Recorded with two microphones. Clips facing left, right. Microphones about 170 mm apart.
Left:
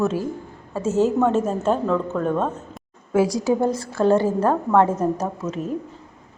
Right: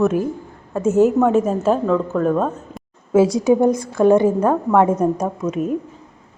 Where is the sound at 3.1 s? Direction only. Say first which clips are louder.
Right 5 dB; 25° right (ahead or behind).